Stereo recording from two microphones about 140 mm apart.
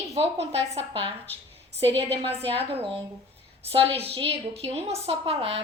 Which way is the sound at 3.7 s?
45° right (ahead or behind).